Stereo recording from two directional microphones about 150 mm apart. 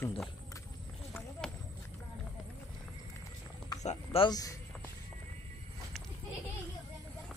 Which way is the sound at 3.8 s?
40° left (ahead or behind).